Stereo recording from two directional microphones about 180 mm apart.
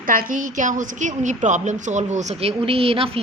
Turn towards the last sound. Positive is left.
turn(degrees=-30)  # may be behind; listen again after turning